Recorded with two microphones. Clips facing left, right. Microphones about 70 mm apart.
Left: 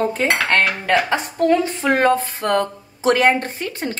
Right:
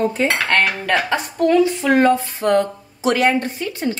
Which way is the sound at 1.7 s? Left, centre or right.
Left.